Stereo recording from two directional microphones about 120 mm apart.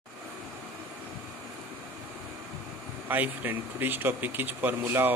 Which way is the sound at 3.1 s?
15° right (ahead or behind).